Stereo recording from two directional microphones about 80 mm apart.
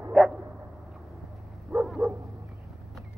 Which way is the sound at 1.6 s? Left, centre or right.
Centre.